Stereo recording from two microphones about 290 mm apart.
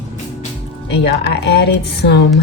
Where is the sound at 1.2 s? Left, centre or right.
Left.